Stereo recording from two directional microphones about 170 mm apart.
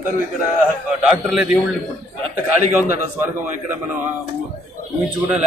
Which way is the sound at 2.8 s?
10° right (ahead or behind).